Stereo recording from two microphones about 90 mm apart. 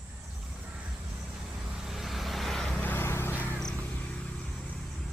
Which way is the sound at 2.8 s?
20° left (ahead or behind).